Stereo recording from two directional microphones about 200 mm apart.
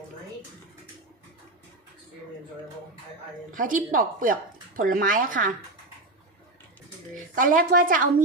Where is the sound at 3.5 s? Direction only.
45° right (ahead or behind).